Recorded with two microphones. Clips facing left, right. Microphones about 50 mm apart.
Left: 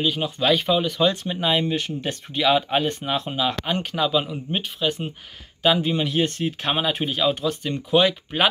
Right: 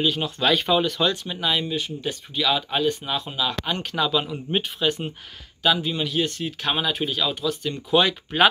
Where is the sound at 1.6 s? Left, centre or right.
Left.